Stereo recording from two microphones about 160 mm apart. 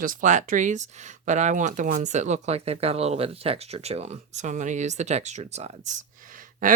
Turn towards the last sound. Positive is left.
turn(degrees=-55)  # may be behind; listen again after turning